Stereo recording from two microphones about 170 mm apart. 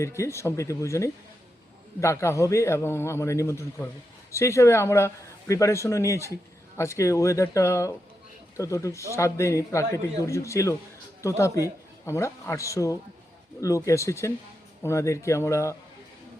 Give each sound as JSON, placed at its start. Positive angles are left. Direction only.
{"t": 0.0, "sound": "speech", "side_deg": 15}